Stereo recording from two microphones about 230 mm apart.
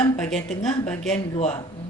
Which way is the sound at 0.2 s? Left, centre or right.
Centre.